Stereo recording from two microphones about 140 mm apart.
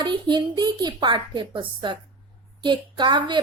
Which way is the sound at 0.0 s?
35° right (ahead or behind).